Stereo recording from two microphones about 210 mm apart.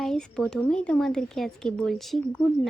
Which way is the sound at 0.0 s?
5° left (ahead or behind).